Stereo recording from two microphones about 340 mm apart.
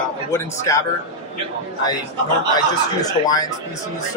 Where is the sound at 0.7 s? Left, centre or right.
Centre.